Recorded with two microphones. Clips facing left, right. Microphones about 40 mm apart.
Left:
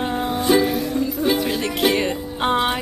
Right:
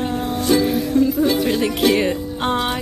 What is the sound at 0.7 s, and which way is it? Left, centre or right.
Music, centre.